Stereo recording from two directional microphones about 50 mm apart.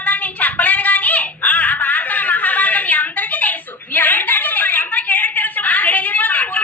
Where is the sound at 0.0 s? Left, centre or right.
Left.